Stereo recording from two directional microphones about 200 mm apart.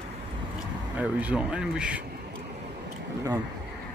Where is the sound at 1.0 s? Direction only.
5° right (ahead or behind).